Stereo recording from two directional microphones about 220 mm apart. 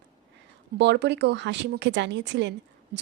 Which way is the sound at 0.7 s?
50° right (ahead or behind).